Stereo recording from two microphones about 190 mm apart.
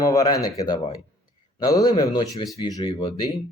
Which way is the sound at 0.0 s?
20° left (ahead or behind).